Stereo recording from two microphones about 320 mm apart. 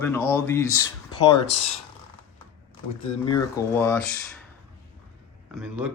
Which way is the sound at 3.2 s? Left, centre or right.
Centre.